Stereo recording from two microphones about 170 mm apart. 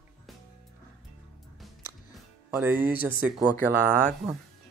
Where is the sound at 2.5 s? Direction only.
10° right (ahead or behind).